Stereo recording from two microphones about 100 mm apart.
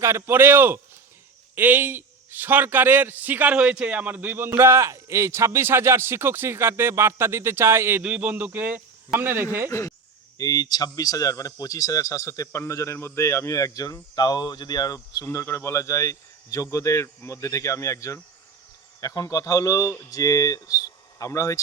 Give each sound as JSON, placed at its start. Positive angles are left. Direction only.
{"t": 0.0, "sound": "a man's voice", "side_deg": -25}
{"t": 8.0, "sound": "a man's voice", "side_deg": -10}
{"t": 9.6, "sound": "speech", "side_deg": 30}